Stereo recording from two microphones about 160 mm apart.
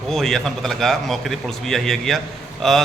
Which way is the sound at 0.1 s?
5° left (ahead or behind).